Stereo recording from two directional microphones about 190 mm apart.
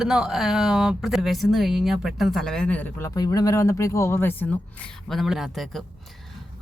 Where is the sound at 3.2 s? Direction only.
20° left (ahead or behind).